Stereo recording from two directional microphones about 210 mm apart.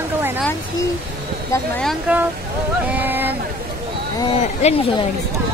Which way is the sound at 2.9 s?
10° right (ahead or behind).